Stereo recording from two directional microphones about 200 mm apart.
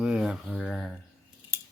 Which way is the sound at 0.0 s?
5° right (ahead or behind).